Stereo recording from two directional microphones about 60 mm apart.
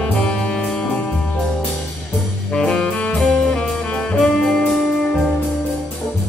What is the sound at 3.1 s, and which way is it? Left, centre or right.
Music, centre.